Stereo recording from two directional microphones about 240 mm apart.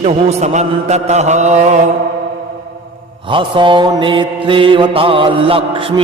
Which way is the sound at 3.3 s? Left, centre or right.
Right.